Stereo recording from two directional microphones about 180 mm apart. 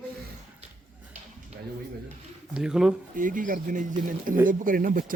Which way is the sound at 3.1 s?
50° right (ahead or behind).